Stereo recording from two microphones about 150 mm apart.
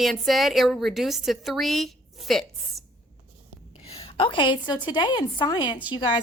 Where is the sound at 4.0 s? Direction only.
35° left (ahead or behind).